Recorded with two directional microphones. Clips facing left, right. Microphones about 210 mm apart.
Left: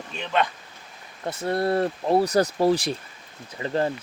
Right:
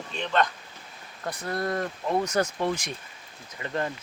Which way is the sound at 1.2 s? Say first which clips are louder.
Left 5 dB; 25° left (ahead or behind).